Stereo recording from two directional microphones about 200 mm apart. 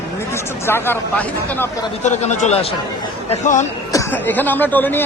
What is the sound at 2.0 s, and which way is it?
A man's voice, 35° left (ahead or behind).